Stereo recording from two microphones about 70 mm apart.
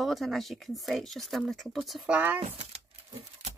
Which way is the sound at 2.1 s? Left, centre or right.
Right.